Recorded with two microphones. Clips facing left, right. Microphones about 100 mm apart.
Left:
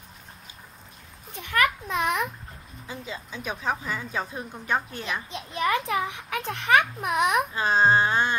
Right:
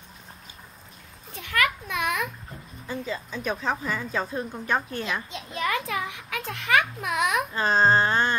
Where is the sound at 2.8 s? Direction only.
15° left (ahead or behind).